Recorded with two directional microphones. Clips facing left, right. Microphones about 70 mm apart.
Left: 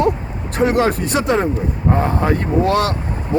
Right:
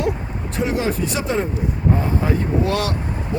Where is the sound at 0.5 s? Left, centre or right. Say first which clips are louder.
Left 6 dB; left.